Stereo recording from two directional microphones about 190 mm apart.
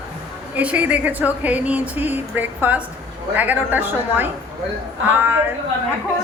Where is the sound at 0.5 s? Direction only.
10° right (ahead or behind).